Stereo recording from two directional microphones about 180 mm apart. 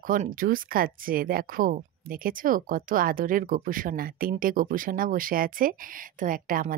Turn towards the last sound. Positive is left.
turn(degrees=-50)  # may be behind; listen again after turning